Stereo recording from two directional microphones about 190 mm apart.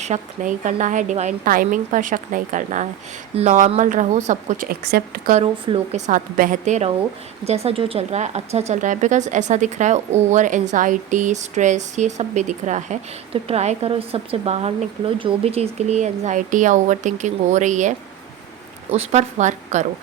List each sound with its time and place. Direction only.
0.0 s a woman's voice: 40° right (ahead or behind); by 5.3 s 55° right (ahead or behind)
5.3 s speech: 30° right (ahead or behind)
6.1 s a woman's voice: 45° right (ahead or behind)